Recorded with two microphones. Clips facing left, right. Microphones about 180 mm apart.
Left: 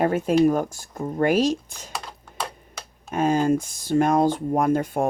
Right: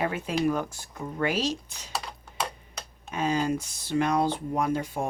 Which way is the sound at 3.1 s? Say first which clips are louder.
Left 6 dB; 50° left (ahead or behind).